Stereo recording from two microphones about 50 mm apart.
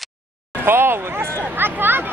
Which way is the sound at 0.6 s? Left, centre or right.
Right.